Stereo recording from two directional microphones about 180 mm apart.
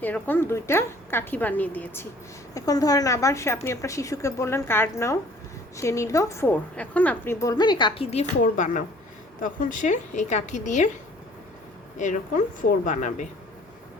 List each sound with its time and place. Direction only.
0.0 s a woman's voice: 10° left (ahead or behind); by 10.8 s 40° left (ahead or behind)
12.8 s a woman's voice: 45° left (ahead or behind)